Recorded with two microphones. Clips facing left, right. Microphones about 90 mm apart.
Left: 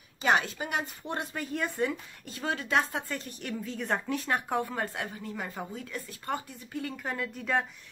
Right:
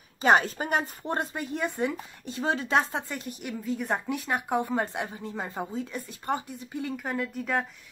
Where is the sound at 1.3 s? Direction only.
25° right (ahead or behind).